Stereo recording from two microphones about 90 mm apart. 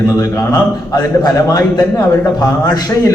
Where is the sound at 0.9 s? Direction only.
45° left (ahead or behind).